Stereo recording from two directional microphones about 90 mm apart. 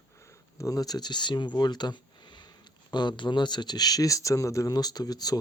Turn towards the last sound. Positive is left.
turn(degrees=45)  # may be behind; listen again after turning